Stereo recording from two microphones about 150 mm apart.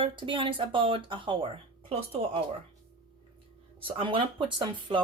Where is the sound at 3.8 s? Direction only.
35° right (ahead or behind).